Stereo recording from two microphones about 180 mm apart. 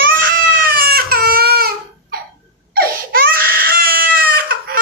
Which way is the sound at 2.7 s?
55° right (ahead or behind).